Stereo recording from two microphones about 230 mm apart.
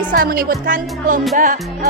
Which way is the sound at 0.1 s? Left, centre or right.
Right.